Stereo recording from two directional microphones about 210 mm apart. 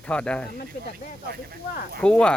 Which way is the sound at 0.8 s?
50° left (ahead or behind).